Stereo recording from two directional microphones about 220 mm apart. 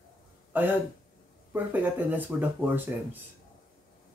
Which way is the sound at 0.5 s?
10° right (ahead or behind).